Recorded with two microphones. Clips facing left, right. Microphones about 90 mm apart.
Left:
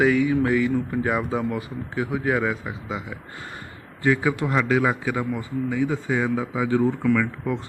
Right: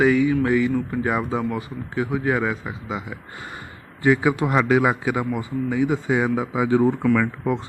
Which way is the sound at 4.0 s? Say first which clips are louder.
Right 3 dB; 15° right (ahead or behind).